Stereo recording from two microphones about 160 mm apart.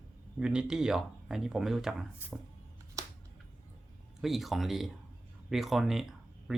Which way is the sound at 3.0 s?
20° right (ahead or behind).